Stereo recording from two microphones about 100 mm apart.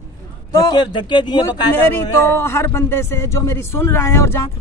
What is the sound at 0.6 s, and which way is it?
Speech, 45° left (ahead or behind).